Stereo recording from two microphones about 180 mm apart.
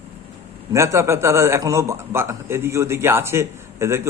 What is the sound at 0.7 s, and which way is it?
A man's voice, 15° right (ahead or behind).